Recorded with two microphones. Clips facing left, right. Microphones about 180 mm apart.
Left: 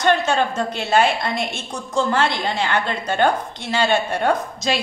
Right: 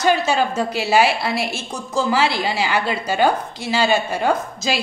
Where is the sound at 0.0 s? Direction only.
5° right (ahead or behind).